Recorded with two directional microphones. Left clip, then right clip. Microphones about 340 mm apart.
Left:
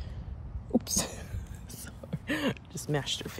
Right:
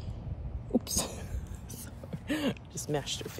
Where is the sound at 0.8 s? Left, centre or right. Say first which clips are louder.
Left 2 dB; centre.